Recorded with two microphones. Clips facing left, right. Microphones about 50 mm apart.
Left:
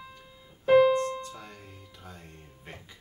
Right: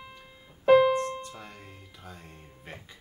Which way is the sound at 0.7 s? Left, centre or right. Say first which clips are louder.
Even; right.